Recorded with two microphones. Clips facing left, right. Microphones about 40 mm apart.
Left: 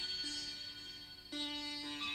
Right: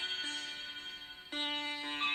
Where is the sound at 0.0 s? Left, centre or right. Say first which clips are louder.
Right 5 dB; right.